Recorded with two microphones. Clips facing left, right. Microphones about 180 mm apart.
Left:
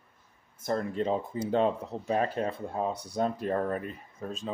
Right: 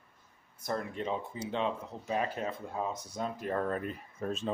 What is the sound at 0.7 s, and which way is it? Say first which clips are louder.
Speech: left 6 dB; 35° left (ahead or behind).